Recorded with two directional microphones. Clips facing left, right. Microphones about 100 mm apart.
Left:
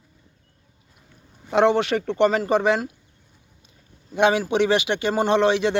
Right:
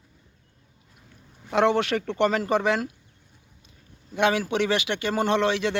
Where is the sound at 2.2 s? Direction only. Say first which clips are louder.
Left 4 dB; 10° left (ahead or behind).